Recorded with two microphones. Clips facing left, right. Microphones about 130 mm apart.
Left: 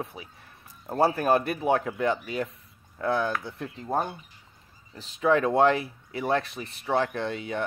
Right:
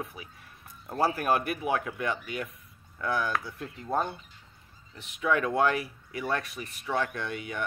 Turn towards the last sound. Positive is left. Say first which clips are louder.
# left 5 dB
turn(degrees=30)  # may be behind; listen again after turning